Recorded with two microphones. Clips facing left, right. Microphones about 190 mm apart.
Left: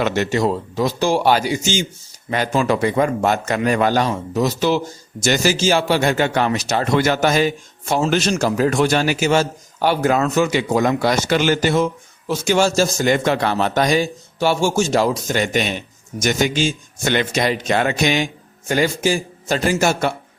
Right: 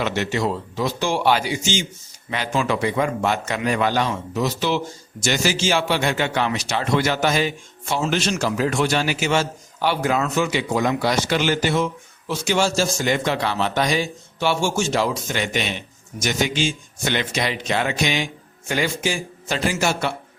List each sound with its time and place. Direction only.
0.0 s a man's voice: 45° left (ahead or behind)